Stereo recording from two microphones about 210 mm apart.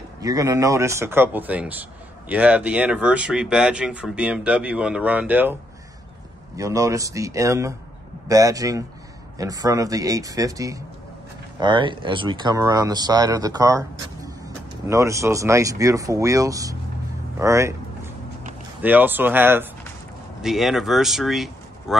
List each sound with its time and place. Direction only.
0.2 s a man's voice: 15° right (ahead or behind)
17.4 s vehicle: 15° right (ahead or behind)
18.8 s a man's voice: 10° right (ahead or behind)